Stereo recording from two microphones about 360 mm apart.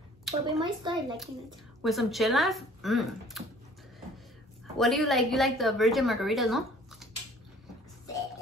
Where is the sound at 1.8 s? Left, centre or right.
Centre.